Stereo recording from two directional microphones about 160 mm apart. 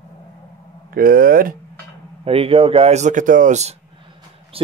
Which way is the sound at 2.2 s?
35° right (ahead or behind).